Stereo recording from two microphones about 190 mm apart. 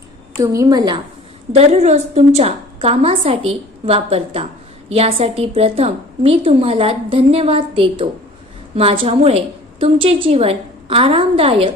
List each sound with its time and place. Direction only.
0.3 s a woman's voice: 15° right (ahead or behind)
1.5 s a woman's voice: 35° right (ahead or behind)